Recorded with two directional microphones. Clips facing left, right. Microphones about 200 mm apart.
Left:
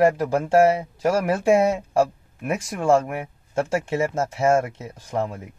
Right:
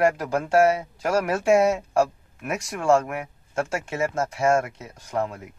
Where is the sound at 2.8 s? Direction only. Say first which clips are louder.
Left 1 dB; 25° left (ahead or behind).